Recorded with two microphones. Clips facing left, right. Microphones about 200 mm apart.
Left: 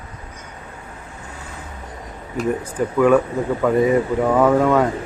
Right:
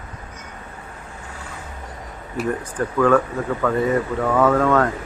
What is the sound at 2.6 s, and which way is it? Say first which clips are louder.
Speech: left 3 dB; 10° left (ahead or behind).